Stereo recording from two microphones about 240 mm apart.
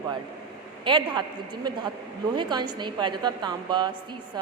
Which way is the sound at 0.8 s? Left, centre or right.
Centre.